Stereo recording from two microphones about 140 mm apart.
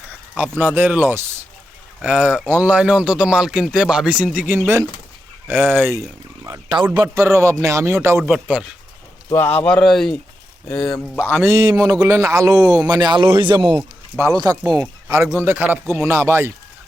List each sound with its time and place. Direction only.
0.1 s speech: 10° right (ahead or behind)
6.4 s a man's voice: 30° right (ahead or behind)
8.2 s speech: 5° right (ahead or behind)
9.3 s speech: 15° left (ahead or behind)
11.3 s a man's voice: 15° right (ahead or behind); by 13.7 s 35° right (ahead or behind)
14.2 s a man's voice: 20° right (ahead or behind)